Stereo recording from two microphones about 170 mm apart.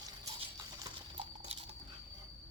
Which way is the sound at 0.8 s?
30° right (ahead or behind).